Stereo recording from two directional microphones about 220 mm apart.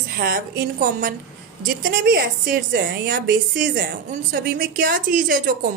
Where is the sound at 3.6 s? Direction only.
40° right (ahead or behind).